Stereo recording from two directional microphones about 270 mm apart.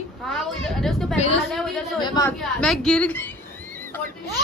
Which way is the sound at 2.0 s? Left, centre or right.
Centre.